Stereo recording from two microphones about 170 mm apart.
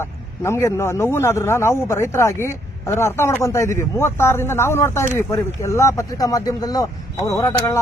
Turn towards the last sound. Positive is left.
turn(degrees=15)  # may be behind; listen again after turning